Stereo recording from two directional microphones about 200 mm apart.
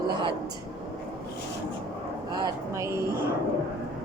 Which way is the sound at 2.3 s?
15° right (ahead or behind).